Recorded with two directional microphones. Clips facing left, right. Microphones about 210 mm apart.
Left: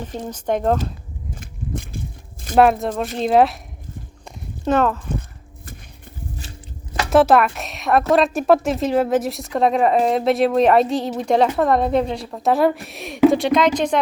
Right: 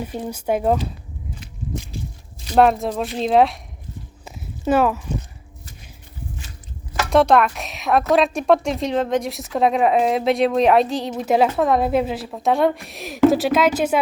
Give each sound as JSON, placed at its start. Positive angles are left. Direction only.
{"t": 0.0, "sound": "speech", "side_deg": -10}
{"t": 1.4, "sound": "a sound", "side_deg": 55}
{"t": 2.6, "sound": "a woman's voice", "side_deg": 0}
{"t": 4.3, "sound": "walk", "side_deg": -5}
{"t": 7.1, "sound": "a woman's voice", "side_deg": 5}